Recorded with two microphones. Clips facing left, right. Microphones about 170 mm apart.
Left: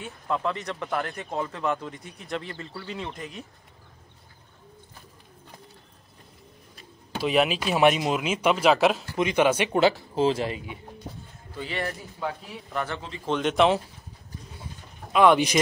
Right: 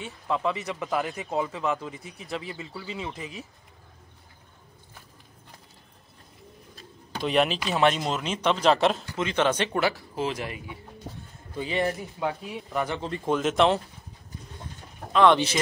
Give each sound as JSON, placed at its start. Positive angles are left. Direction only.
{"t": 0.0, "sound": "speech", "side_deg": 0}
{"t": 7.2, "sound": "speech", "side_deg": 5}
{"t": 9.1, "sound": "speech", "side_deg": 15}
{"t": 9.8, "sound": "speech", "side_deg": 25}
{"t": 11.5, "sound": "speech", "side_deg": -15}
{"t": 13.3, "sound": "speech", "side_deg": 0}
{"t": 15.1, "sound": "speech", "side_deg": 10}